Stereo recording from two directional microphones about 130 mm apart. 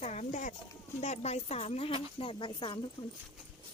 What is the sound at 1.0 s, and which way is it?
Speech, 55° left (ahead or behind).